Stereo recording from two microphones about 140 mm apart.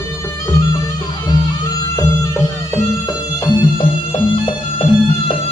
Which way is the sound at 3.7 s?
40° left (ahead or behind).